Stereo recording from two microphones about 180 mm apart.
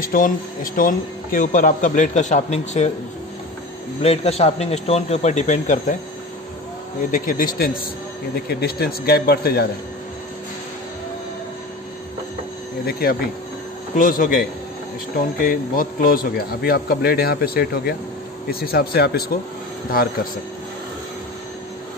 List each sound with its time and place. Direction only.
0.0 s speech: 50° left (ahead or behind)
4.0 s speech: 35° left (ahead or behind)
7.0 s a man's voice: 50° left (ahead or behind)
13.9 s a man's voice: 50° left (ahead or behind)